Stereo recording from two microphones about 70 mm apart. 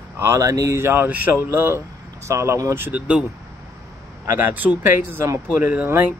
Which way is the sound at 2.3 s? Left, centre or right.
Right.